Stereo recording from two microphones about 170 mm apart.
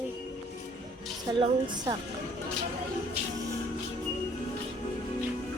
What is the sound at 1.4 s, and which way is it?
Speech, 25° right (ahead or behind).